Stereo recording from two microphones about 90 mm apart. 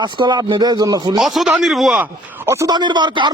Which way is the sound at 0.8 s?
45° right (ahead or behind).